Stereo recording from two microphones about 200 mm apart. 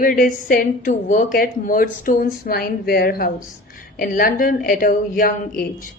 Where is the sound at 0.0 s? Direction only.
45° left (ahead or behind).